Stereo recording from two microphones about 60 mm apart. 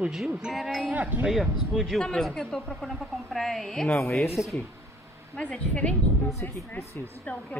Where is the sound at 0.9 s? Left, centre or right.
Right.